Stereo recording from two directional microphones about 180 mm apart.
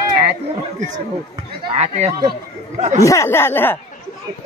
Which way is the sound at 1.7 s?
40° right (ahead or behind).